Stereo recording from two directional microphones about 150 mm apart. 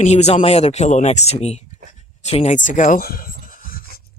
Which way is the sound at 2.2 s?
45° left (ahead or behind).